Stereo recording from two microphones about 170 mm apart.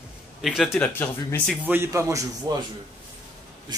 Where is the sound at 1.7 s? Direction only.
15° right (ahead or behind).